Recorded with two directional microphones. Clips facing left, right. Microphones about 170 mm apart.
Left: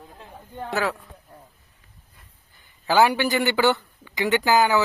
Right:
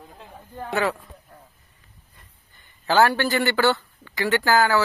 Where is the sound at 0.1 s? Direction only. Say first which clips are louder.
Even; 5° right (ahead or behind).